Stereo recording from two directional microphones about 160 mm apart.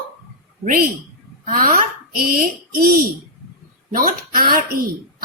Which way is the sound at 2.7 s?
70° right (ahead or behind).